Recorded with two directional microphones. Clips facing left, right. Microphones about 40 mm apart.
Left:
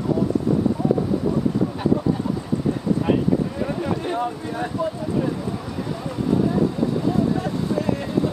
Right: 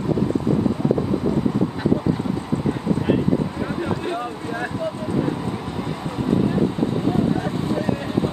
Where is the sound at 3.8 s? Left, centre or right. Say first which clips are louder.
Right 1 dB; right.